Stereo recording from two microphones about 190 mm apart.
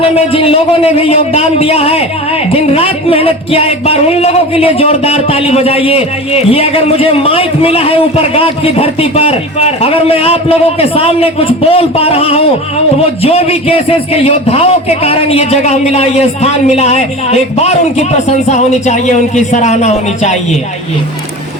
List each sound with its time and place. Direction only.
0.3 s a man's voice: 30° left (ahead or behind)